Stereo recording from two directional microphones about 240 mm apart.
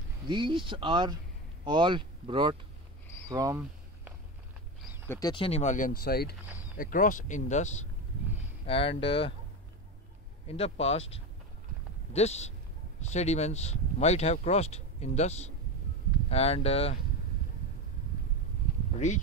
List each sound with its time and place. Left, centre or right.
0.3 s speech: centre
3.3 s a sound: centre
5.1 s speech: centre
10.4 s speech: left
18.9 s speech: left